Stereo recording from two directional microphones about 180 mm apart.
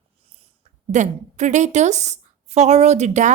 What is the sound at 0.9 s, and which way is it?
A woman's voice, 40° right (ahead or behind).